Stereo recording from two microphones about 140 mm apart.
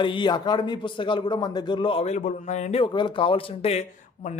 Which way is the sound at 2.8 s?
35° left (ahead or behind).